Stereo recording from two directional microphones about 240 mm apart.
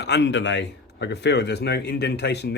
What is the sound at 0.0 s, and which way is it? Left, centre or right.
A man's voice, left.